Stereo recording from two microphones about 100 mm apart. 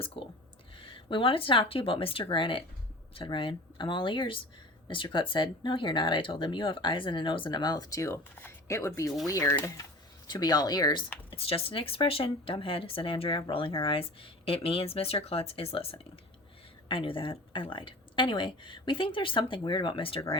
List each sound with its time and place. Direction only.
0.0 s a woman's voice: 65° left (ahead or behind); by 9.8 s 30° left (ahead or behind)
10.2 s speech: 40° left (ahead or behind)
11.3 s speech: 75° left (ahead or behind)
16.9 s a woman's voice: 60° left (ahead or behind)